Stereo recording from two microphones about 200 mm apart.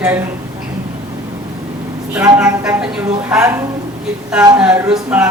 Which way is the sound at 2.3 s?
5° right (ahead or behind).